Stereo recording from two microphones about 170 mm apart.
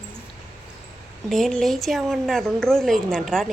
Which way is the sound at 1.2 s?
Centre (ahead or behind).